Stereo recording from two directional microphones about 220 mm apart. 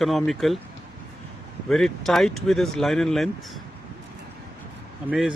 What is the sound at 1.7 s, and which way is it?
Speech, centre (ahead or behind).